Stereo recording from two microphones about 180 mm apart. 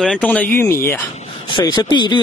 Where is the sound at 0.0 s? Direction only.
5° left (ahead or behind).